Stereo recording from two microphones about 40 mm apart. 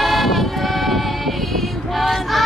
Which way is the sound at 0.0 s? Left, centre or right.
Centre.